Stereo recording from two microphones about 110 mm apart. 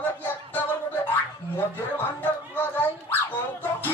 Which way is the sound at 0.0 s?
15° left (ahead or behind).